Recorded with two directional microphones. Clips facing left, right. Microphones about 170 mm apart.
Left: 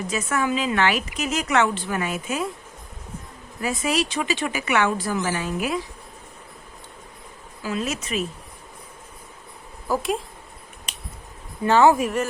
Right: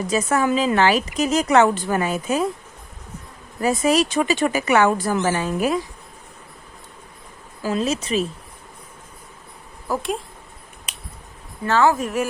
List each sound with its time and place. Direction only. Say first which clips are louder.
0.1 s a woman's voice: right 5 dB; 35° right (ahead or behind)
3.6 s a woman's voice: right 6 dB; 40° right (ahead or behind)
4.9 s speech: right 4 dB; 50° right (ahead or behind)
7.6 s a woman's voice: right 5 dB; 35° right (ahead or behind)
9.8 s speech: left 1 dB; centre (ahead or behind)
11.6 s speech: left 2 dB; 15° left (ahead or behind)
12.0 s a woman's voice: right 1 dB; 10° right (ahead or behind)